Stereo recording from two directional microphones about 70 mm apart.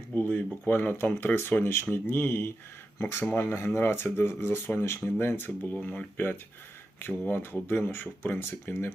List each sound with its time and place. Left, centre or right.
0.1 s speech: left
5.8 s speech: centre
7.1 s speech: left